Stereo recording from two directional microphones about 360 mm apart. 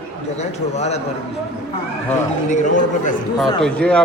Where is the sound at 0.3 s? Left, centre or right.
Centre.